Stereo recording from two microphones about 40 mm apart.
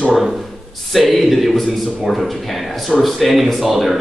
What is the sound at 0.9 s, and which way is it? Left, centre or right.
Speech, centre.